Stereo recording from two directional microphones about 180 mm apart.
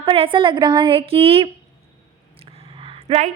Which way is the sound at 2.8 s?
30° right (ahead or behind).